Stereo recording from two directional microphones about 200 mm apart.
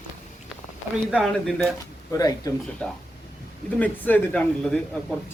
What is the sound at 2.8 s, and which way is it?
Speech, 5° left (ahead or behind).